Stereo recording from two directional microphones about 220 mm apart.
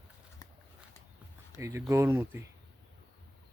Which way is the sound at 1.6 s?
15° right (ahead or behind).